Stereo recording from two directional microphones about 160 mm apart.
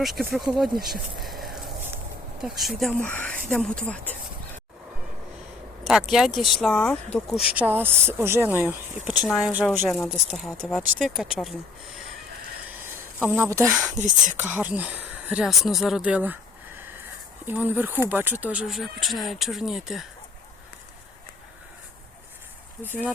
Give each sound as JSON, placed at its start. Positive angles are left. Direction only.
{"t": 0.0, "sound": "speech", "side_deg": 0}
{"t": 5.9, "sound": "speech", "side_deg": 0}
{"t": 7.4, "sound": "speech", "side_deg": -10}
{"t": 13.1, "sound": "speech", "side_deg": -15}
{"t": 13.9, "sound": "speech", "side_deg": -50}
{"t": 14.4, "sound": "speech", "side_deg": -10}
{"t": 17.4, "sound": "speech", "side_deg": -10}
{"t": 22.8, "sound": "speech", "side_deg": -10}